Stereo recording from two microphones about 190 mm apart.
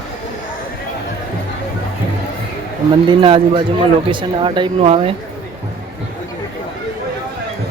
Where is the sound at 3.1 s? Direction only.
25° right (ahead or behind).